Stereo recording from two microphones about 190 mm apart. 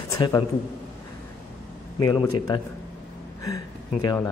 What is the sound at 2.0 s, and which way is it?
Speech, 20° left (ahead or behind).